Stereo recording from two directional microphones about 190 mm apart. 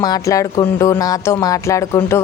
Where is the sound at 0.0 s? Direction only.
20° left (ahead or behind).